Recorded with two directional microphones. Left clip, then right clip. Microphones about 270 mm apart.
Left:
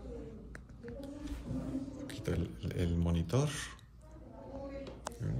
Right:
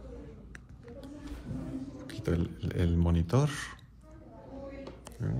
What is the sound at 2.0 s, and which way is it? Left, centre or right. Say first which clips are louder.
Speech: right 8 dB; centre.